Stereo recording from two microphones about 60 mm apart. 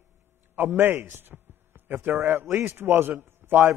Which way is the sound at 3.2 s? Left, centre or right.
Right.